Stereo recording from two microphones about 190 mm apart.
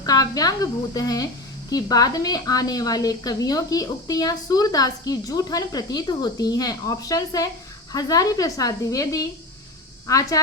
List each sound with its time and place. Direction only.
0.0 s a woman's voice: 20° left (ahead or behind)